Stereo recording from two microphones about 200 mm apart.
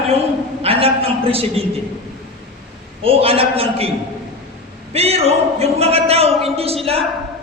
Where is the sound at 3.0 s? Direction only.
30° right (ahead or behind).